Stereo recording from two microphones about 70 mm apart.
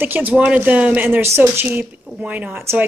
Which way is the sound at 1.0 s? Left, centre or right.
Right.